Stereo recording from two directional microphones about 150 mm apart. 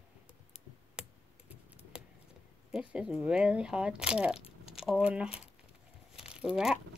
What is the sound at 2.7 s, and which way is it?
Speech, 5° right (ahead or behind).